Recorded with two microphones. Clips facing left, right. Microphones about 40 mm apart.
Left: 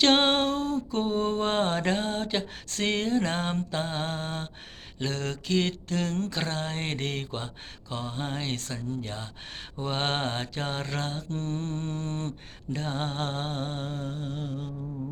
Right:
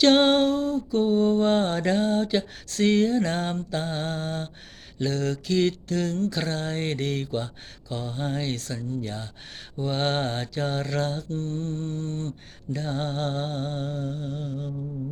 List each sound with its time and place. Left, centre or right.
0.0 s a sound: left
1.0 s mantra: left
11.3 s mantra: left
12.7 s mantra: left